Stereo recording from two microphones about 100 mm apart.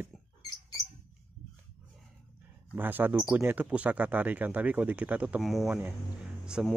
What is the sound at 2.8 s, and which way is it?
Speech, 20° right (ahead or behind).